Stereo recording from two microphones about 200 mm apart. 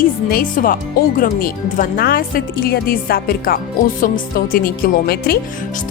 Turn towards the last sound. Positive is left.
turn(degrees=50)  # may be behind; listen again after turning